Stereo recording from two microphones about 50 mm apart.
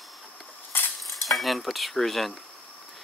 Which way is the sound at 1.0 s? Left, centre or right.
Centre.